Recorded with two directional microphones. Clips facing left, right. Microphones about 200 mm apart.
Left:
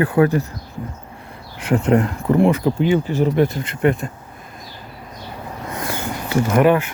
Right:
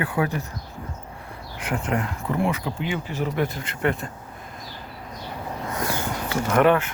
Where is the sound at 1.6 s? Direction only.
30° left (ahead or behind).